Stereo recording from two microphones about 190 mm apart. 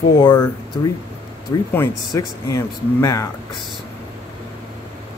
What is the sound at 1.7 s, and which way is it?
Speech, 15° left (ahead or behind).